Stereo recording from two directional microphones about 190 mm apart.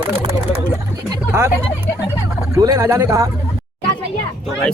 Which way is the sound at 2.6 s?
15° right (ahead or behind).